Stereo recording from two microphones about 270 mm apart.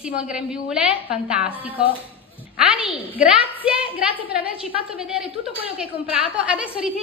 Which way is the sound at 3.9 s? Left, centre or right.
Centre.